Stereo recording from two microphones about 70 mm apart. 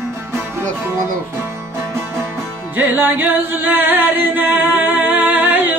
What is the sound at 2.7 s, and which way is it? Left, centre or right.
Music, right.